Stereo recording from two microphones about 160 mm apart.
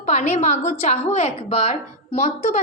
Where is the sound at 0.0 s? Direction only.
45° left (ahead or behind).